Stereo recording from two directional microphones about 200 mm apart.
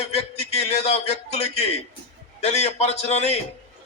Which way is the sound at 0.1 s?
35° left (ahead or behind).